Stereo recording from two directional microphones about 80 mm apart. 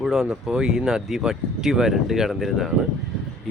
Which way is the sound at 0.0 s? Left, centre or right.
Centre.